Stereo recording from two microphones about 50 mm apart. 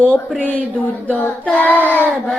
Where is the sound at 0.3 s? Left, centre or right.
Left.